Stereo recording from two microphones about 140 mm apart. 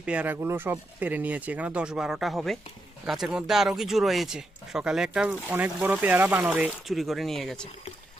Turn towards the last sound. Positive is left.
turn(degrees=0)  # may be behind; listen again after turning